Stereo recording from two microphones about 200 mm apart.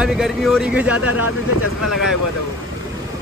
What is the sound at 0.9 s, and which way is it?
Speech, 90° left.